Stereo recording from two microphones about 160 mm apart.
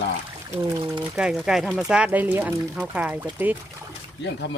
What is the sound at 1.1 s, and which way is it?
Speech, 5° right (ahead or behind).